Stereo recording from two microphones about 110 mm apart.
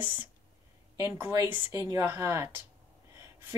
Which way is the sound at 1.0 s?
25° right (ahead or behind).